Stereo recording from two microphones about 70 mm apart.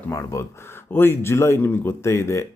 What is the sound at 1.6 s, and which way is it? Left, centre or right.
Speech, left.